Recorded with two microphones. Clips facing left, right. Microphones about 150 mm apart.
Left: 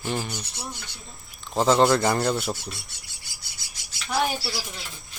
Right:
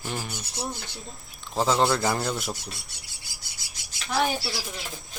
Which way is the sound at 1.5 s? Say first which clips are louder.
Left 4 dB; centre (ahead or behind).